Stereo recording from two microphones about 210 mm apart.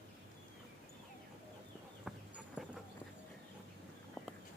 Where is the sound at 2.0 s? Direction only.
5° right (ahead or behind).